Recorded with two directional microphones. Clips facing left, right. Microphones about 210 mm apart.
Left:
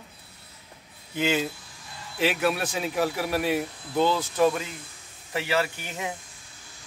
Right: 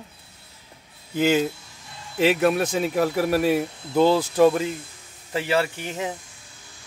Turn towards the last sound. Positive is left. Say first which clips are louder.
# right 4 dB
turn(degrees=-30)  # may be behind; listen again after turning